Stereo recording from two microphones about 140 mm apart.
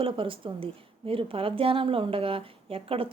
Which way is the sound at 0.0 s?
40° right (ahead or behind).